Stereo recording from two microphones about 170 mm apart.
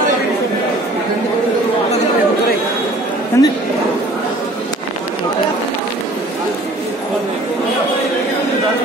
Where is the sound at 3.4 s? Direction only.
20° left (ahead or behind).